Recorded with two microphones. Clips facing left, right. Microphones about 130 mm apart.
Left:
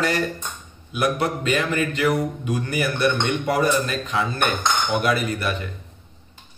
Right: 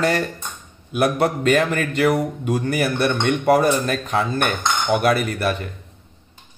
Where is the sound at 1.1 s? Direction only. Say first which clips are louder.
Right 5 dB; 45° right (ahead or behind).